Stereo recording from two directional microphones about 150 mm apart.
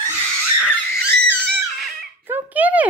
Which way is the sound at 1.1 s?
10° left (ahead or behind).